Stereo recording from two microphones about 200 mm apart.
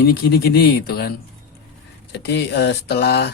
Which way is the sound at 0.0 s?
50° left (ahead or behind).